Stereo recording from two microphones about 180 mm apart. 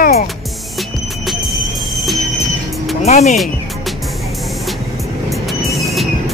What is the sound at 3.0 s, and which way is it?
Speech, 40° left (ahead or behind).